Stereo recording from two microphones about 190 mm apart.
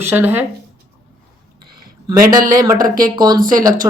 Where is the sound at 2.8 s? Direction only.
50° right (ahead or behind).